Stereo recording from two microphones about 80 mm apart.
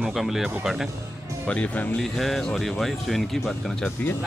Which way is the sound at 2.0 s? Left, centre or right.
Centre.